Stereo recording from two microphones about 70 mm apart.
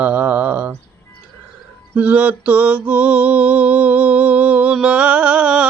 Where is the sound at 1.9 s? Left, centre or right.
Right.